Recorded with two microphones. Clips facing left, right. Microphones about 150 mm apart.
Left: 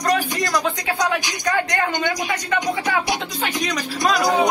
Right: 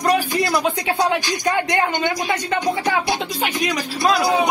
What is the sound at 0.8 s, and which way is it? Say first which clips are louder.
Speech: right 3 dB; 25° right (ahead or behind).